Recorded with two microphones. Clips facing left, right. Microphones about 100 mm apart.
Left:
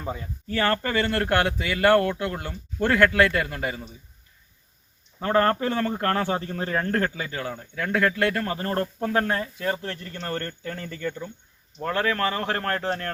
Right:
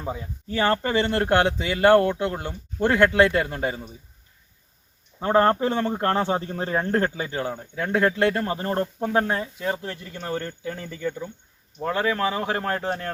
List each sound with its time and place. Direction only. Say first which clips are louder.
0.0 s speech: right 1 dB; 10° right (ahead or behind)
0.4 s speech: right 2 dB; 20° right (ahead or behind)
5.2 s speech: right 2 dB; 20° right (ahead or behind)